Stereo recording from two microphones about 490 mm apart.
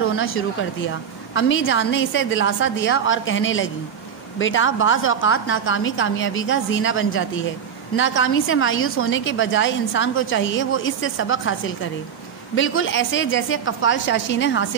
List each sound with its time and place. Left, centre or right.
0.0 s a woman's voice: left